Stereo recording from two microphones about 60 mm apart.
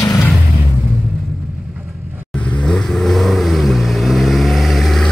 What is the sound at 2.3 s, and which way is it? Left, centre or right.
Vehicle, left.